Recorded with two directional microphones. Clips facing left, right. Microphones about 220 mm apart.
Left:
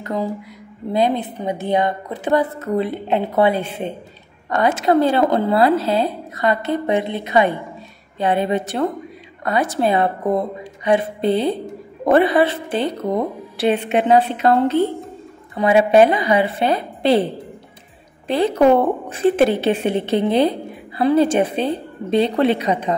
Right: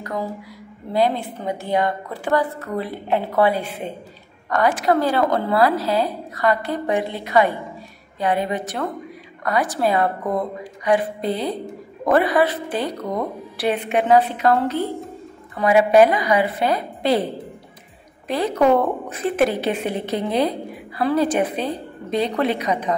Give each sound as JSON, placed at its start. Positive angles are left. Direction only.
{"t": 0.0, "sound": "a woman's voice", "side_deg": 20}